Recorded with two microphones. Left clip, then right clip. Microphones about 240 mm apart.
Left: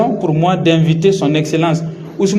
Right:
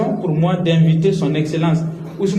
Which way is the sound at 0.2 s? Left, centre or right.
Left.